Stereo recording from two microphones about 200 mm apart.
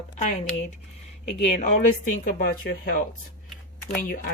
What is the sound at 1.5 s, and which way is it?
Speech, 35° left (ahead or behind).